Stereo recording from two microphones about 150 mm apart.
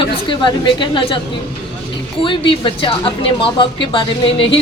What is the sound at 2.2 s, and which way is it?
A woman's voice, 35° left (ahead or behind).